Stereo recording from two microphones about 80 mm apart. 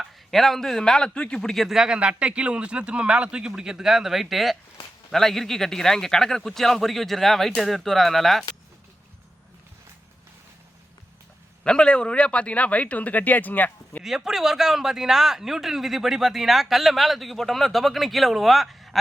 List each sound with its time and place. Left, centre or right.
0.0 s speech: centre
11.6 s a man's voice: centre
14.0 s speech: centre